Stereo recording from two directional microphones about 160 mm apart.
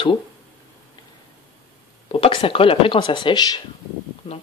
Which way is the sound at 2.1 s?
35° left (ahead or behind).